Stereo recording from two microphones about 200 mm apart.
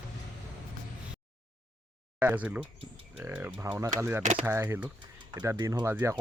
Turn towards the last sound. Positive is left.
turn(degrees=-10)  # may be behind; listen again after turning